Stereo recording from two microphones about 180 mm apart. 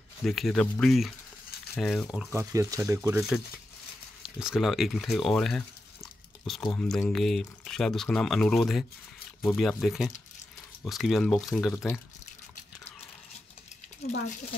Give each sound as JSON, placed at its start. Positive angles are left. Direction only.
{"t": 0.2, "sound": "speech", "side_deg": 0}
{"t": 2.3, "sound": "speech", "side_deg": -15}
{"t": 4.4, "sound": "speech", "side_deg": 0}